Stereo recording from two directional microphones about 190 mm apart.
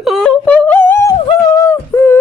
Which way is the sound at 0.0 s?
Centre (ahead or behind).